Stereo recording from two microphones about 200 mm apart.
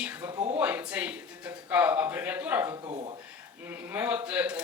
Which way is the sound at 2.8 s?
25° right (ahead or behind).